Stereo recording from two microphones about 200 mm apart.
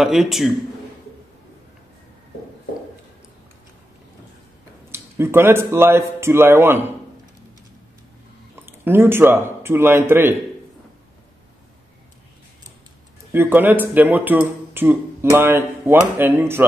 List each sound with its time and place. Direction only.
0.0 s a man's voice: centre (ahead or behind)
4.9 s speech: 10° right (ahead or behind)
8.8 s speech: 10° right (ahead or behind)
13.3 s speech: 10° right (ahead or behind)